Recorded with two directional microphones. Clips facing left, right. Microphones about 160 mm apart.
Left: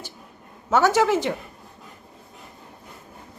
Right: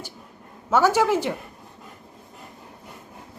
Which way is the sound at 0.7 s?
10° right (ahead or behind).